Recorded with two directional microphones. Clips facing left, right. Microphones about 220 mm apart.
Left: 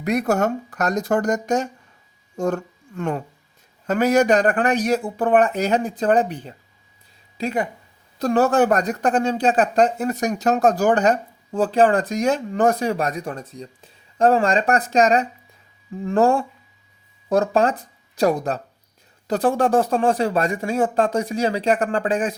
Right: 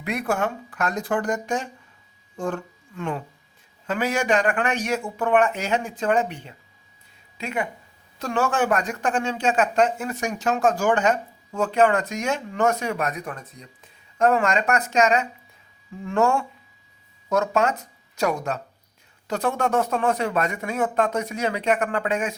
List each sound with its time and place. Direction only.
0.0 s speech: 40° left (ahead or behind)